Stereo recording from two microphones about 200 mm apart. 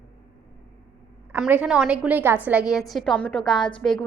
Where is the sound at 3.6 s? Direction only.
25° left (ahead or behind).